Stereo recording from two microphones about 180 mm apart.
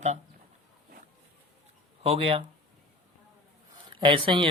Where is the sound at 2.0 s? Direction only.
30° right (ahead or behind).